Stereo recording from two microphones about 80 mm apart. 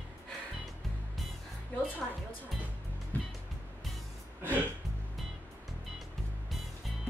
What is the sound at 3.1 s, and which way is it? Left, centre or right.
Music, centre.